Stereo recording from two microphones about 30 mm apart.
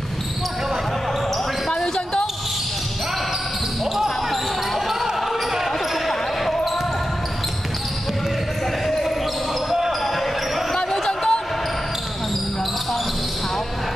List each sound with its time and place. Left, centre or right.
3.9 s basketball bounce: centre
6.0 s basketball bounce: centre
8.8 s basketball bounce: centre
9.7 s basketball bounce: centre
10.1 s basketball bounce: centre
11.1 s basketball bounce: left